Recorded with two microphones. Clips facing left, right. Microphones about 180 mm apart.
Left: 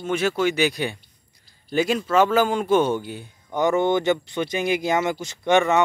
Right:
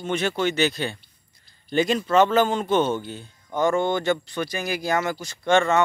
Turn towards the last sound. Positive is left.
turn(degrees=15)  # may be behind; listen again after turning